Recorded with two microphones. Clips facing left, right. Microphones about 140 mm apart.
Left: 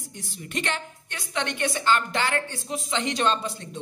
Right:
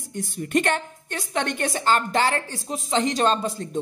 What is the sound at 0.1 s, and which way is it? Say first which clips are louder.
A woman's voice: right 11 dB; 50° right (ahead or behind).